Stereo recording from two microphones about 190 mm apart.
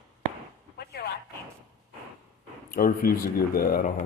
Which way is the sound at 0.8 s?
60° left (ahead or behind).